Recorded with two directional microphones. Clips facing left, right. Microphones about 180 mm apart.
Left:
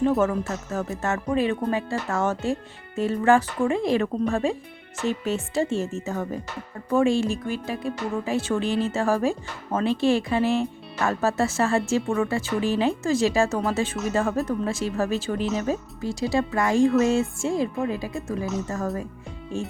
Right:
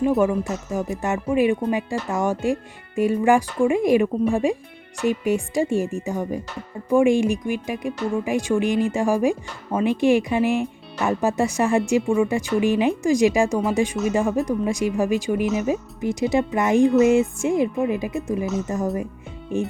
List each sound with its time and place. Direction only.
0.2 s speech: 15° right (ahead or behind)
19.5 s music: 20° right (ahead or behind)